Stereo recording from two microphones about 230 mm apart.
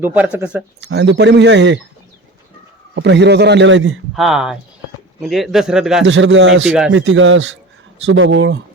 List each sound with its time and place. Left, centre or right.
0.0 s speech: centre
0.8 s speech: right
2.9 s speech: right
4.1 s speech: centre
6.1 s speech: right